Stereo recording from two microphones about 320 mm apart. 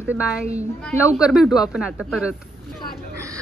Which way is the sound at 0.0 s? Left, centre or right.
Centre.